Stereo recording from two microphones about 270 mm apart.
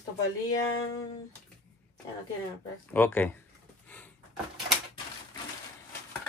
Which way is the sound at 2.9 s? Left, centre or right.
Centre.